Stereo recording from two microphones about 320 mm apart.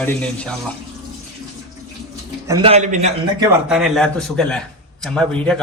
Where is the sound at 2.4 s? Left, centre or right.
Centre.